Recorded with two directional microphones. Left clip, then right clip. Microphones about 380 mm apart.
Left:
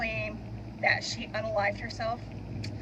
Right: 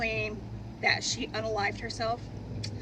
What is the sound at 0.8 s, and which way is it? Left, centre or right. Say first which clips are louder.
Speech: even; right.